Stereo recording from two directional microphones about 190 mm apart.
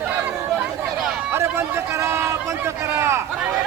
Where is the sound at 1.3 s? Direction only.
15° right (ahead or behind).